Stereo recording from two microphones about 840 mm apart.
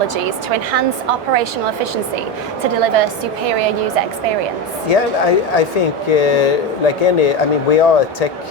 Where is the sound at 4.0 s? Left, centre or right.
Right.